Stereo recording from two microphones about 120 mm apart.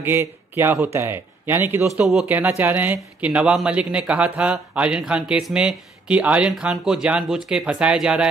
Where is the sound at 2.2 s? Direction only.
15° right (ahead or behind).